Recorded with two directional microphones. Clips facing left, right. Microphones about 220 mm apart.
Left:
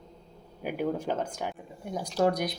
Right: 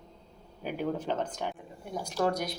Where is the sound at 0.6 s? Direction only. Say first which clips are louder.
Left 2 dB; 10° left (ahead or behind).